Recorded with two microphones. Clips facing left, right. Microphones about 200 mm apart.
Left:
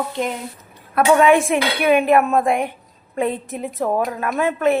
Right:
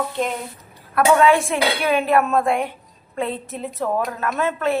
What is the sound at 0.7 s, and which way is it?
A woman's voice, 20° left (ahead or behind).